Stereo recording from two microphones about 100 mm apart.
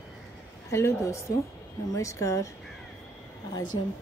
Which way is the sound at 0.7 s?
30° left (ahead or behind).